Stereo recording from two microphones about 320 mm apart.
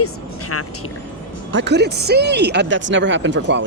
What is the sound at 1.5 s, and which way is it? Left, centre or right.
Speech, right.